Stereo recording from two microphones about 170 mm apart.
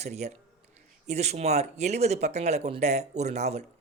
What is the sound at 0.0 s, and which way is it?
Speech, 40° right (ahead or behind).